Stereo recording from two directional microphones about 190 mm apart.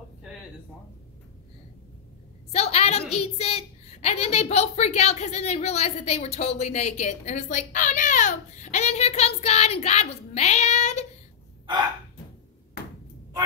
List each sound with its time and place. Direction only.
2.5 s a woman's voice: 35° left (ahead or behind)
12.8 s ping: 55° left (ahead or behind)